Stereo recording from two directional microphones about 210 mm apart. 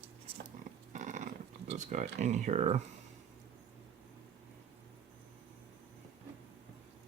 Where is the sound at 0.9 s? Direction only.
35° right (ahead or behind).